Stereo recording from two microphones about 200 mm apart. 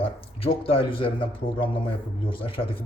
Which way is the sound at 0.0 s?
30° left (ahead or behind).